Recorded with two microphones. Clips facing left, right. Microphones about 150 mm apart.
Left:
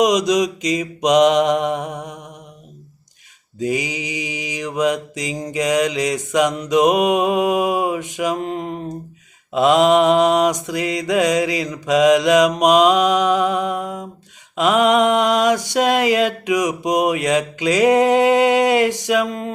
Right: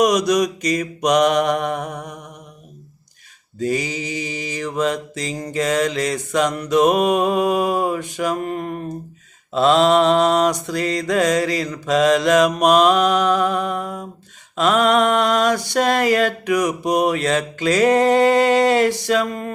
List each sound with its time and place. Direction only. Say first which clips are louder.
0.0 s mantra: left 1 dB; 20° left (ahead or behind)
3.6 s mantra: even; 15° left (ahead or behind)